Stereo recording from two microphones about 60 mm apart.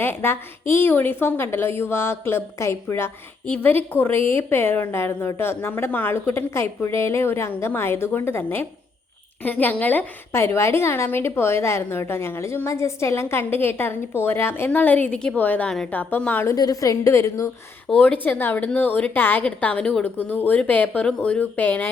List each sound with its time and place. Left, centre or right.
0.0 s a woman's voice: left
3.6 s a woman's voice: left
10.3 s a woman's voice: left
14.7 s a woman's voice: left
16.5 s a woman's voice: left
17.8 s a woman's voice: centre
18.2 s a woman's voice: left
19.5 s a woman's voice: left
20.1 s a woman's voice: left